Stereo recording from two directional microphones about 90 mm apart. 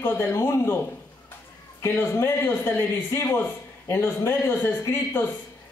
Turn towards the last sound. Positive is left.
turn(degrees=25)  # may be behind; listen again after turning